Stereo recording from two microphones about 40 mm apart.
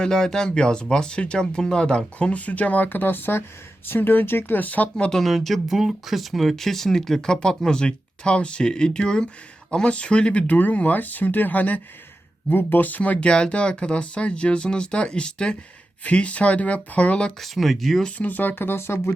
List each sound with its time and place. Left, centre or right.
0.0 s speech: centre
2.1 s speech: left
4.5 s speech: left
5.1 s speech: centre; by 10.4 s left
10.4 s speech: left
13.1 s speech: left
16.0 s speech: left
17.4 s speech: centre
18.2 s speech: left